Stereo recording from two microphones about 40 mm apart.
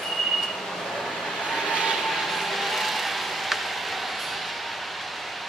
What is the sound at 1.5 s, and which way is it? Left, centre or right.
Vehicle, centre.